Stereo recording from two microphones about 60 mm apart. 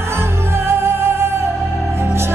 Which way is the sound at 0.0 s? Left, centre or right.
Right.